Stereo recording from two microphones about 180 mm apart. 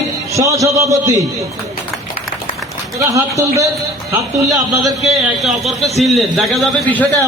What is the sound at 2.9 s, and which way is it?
Speech, 15° right (ahead or behind).